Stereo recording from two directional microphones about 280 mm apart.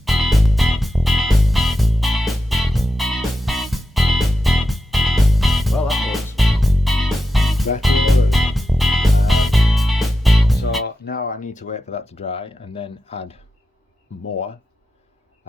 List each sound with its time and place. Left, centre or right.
0.0 s music: centre
10.8 s speech: left